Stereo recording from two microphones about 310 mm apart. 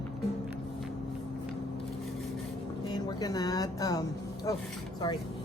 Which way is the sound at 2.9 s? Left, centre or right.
Centre.